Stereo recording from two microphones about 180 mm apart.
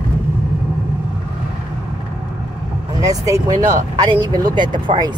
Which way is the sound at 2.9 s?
20° right (ahead or behind).